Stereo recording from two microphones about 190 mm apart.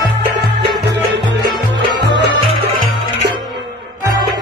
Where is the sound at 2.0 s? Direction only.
65° right (ahead or behind).